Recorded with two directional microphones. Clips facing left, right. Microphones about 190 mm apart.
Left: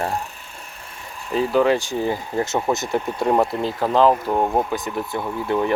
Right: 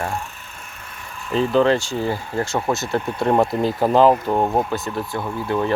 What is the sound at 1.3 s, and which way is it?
Speech, 10° left (ahead or behind).